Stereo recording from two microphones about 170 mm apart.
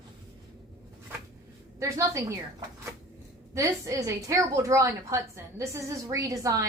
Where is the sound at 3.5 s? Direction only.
20° right (ahead or behind).